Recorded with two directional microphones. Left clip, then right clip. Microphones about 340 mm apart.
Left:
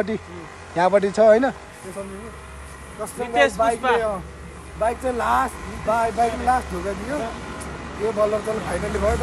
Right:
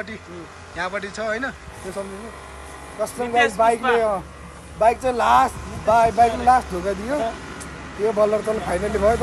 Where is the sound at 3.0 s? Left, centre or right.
Right.